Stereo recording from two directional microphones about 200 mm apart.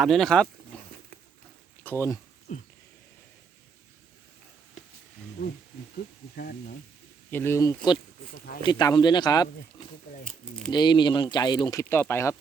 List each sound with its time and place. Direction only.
0.0 s speech: centre (ahead or behind)
0.7 s a sound: 5° left (ahead or behind)
1.8 s speech: 10° left (ahead or behind)
2.5 s speech: 45° left (ahead or behind)
6.3 s speech: 50° left (ahead or behind)
7.3 s speech: 10° left (ahead or behind)
10.7 s speech: 20° left (ahead or behind)